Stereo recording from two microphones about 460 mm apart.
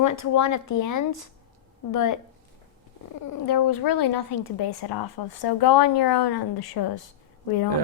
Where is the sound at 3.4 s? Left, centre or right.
Left.